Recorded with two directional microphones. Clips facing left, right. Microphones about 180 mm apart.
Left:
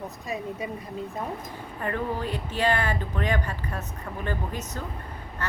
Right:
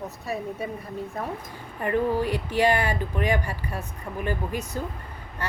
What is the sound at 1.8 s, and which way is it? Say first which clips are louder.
Speech: right 6 dB; 15° right (ahead or behind).